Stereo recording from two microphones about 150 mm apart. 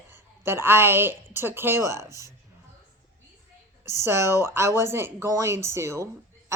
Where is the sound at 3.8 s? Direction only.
15° right (ahead or behind).